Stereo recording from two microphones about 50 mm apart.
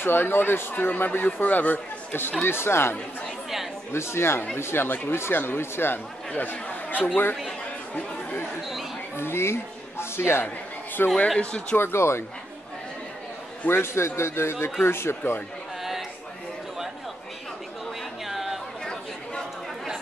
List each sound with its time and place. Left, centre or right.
0.0 s speech: left
2.4 s a man's voice: left
4.8 s speech: left
9.1 s speech: left
11.2 s speech: left
11.7 s a man's voice: left
13.7 s a man's voice: left
18.2 s chatter: centre